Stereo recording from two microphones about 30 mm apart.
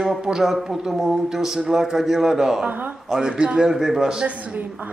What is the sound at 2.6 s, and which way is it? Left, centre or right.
Speech, right.